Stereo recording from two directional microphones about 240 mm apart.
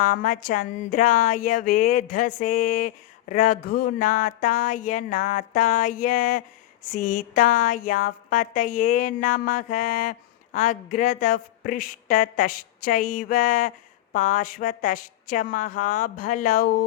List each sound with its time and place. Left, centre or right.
0.0 s a woman's voice: left